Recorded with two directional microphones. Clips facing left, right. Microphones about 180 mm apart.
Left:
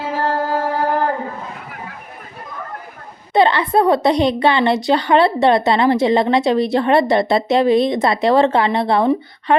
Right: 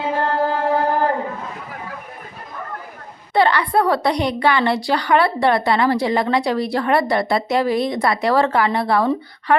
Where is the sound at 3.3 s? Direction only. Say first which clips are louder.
Left 2 dB; 20° left (ahead or behind).